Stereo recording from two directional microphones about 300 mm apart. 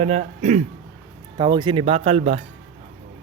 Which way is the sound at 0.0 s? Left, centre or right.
Right.